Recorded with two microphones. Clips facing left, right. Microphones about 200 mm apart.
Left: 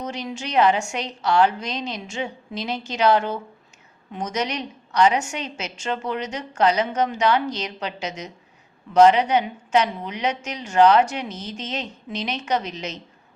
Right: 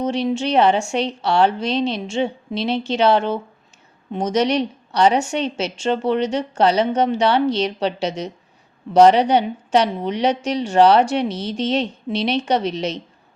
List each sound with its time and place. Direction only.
0.0 s a woman's voice: 30° right (ahead or behind)